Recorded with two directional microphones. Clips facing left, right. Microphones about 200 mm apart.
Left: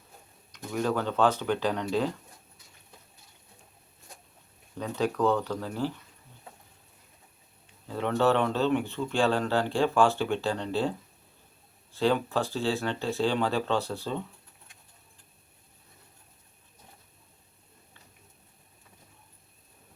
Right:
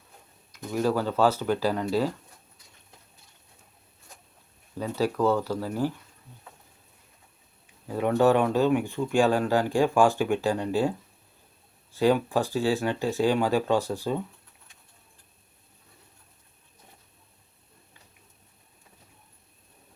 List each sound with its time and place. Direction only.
0.5 s speech: 5° right (ahead or behind)
4.8 s speech: 5° right (ahead or behind)
7.9 s speech: 10° right (ahead or behind)
11.9 s speech: 15° right (ahead or behind)